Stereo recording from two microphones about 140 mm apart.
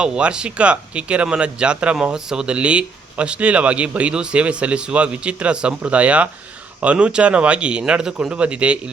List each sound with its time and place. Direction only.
0.0 s speech: 5° right (ahead or behind)